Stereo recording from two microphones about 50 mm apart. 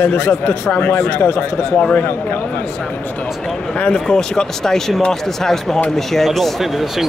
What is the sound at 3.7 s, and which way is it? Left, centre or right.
Speech, centre.